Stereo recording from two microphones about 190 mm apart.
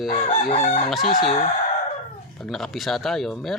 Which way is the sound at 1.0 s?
45° left (ahead or behind).